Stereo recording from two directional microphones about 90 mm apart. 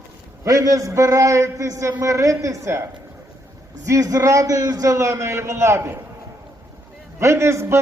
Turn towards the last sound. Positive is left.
turn(degrees=-30)  # may be behind; listen again after turning